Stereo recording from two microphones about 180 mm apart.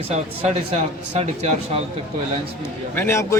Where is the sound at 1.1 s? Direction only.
40° right (ahead or behind).